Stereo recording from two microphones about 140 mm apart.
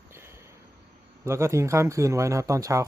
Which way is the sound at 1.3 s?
20° right (ahead or behind).